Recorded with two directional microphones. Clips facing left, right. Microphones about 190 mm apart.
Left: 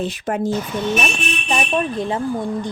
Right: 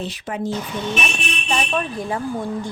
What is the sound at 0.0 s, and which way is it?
Speech, 50° left (ahead or behind).